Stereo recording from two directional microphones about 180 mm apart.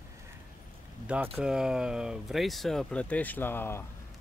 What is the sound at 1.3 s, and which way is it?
Speech, 5° right (ahead or behind).